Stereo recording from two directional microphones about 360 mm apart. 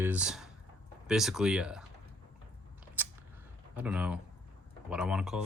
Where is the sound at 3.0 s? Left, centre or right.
Centre.